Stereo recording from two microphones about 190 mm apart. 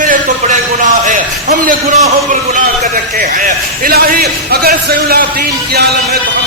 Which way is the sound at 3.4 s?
50° right (ahead or behind).